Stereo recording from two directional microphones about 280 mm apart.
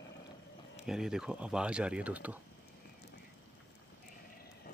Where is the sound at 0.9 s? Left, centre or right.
Centre.